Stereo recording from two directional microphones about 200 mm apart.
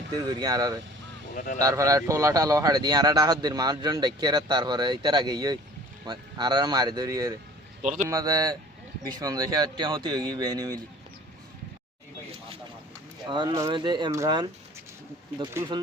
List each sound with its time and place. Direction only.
0.3 s a man's voice: 20° right (ahead or behind)
7.8 s a man's voice: 35° right (ahead or behind)
8.0 s a man's voice: 15° right (ahead or behind)
13.2 s a man's voice: 20° right (ahead or behind)